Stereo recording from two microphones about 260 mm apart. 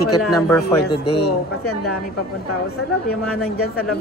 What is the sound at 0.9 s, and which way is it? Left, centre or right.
Speech, left.